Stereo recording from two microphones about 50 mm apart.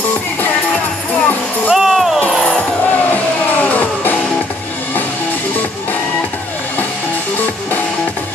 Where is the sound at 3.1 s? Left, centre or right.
Left.